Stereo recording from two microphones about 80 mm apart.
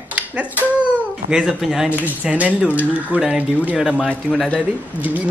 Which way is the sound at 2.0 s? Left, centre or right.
Centre.